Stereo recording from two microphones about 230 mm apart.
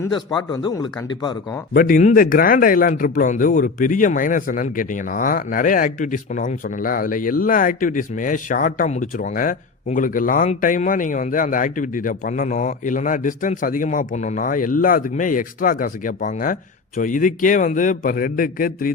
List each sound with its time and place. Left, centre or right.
0.5 s speech: centre
1.7 s speech: left